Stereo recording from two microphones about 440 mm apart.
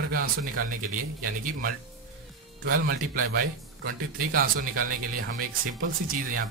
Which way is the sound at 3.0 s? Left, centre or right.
Centre.